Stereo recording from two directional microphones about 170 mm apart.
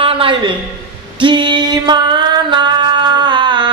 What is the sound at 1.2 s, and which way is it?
Music, 25° right (ahead or behind).